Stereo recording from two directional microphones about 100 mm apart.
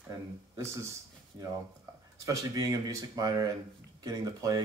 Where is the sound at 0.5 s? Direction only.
30° right (ahead or behind).